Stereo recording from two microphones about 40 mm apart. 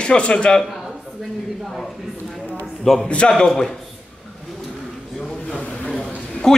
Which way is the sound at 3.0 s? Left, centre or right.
Left.